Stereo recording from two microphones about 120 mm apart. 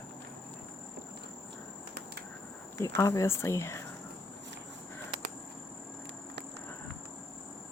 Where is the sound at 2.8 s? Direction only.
25° left (ahead or behind).